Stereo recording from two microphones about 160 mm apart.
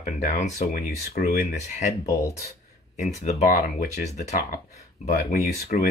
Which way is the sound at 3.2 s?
45° left (ahead or behind).